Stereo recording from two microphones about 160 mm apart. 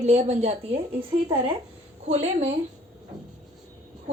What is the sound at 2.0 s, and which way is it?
Speech, 40° right (ahead or behind).